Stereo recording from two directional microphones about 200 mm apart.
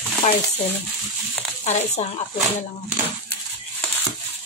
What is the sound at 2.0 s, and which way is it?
Speech, 30° left (ahead or behind).